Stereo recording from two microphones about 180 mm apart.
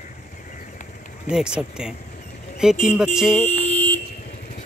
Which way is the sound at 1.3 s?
5° right (ahead or behind).